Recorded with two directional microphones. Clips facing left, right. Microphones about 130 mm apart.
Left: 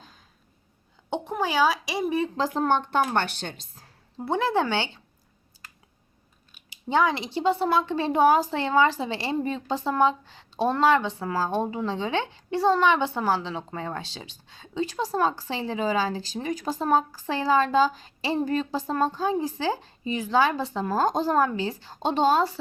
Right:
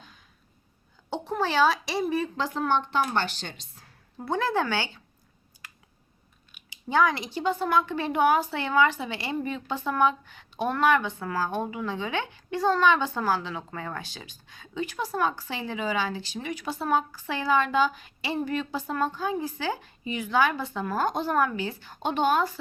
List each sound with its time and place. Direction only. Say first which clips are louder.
1.1 s speech: even; 15° left (ahead or behind)
2.6 s a woman's voice: left 2 dB; 45° left (ahead or behind)
4.2 s a woman's voice: left 2 dB; 20° left (ahead or behind)
6.8 s a woman's voice: left 1 dB; 25° left (ahead or behind)